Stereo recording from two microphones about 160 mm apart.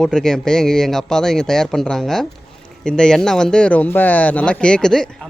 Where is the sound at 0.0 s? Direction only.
5° left (ahead or behind).